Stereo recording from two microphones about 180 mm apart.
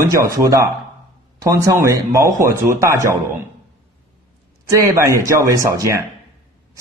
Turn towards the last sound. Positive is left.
turn(degrees=-15)  # may be behind; listen again after turning